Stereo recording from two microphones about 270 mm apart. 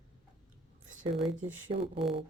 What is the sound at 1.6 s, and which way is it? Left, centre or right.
Speech, centre.